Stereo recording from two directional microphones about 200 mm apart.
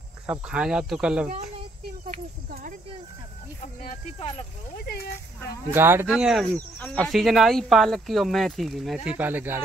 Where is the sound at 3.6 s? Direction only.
40° left (ahead or behind).